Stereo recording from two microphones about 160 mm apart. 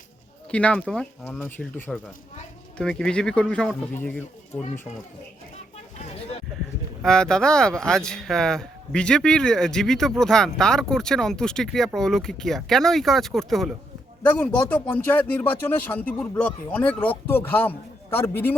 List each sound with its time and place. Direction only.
0.5 s speech: 5° left (ahead or behind)
7.0 s speech: 5° left (ahead or behind)